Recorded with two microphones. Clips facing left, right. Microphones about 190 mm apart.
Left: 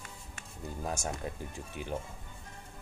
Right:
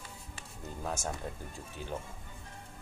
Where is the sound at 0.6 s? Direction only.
10° left (ahead or behind).